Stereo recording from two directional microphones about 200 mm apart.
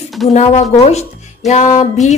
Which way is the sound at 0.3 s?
35° left (ahead or behind).